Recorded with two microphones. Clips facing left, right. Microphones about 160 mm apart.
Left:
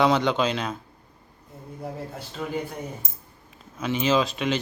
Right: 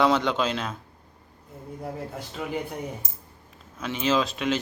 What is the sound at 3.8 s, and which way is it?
Speech, centre (ahead or behind).